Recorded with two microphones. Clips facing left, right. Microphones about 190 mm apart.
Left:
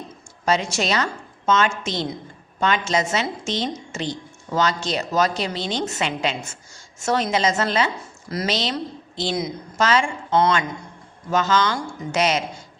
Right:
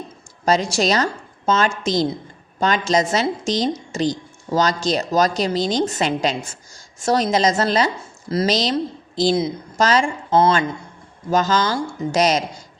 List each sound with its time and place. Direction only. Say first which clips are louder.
0.4 s a woman's voice: right 4 dB; 35° right (ahead or behind)